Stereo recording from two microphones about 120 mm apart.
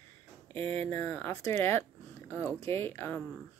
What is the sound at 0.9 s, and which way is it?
Speech, 20° left (ahead or behind).